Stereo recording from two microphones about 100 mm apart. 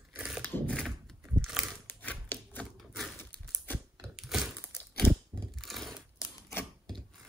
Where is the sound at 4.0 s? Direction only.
5° right (ahead or behind).